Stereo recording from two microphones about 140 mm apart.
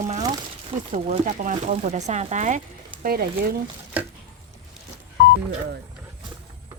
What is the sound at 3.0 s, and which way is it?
Speech, 90° right.